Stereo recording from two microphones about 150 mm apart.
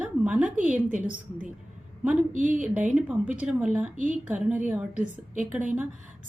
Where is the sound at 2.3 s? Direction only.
60° right (ahead or behind).